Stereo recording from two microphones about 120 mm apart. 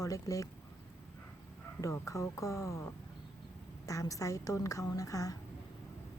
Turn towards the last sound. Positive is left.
turn(degrees=30)  # may be behind; listen again after turning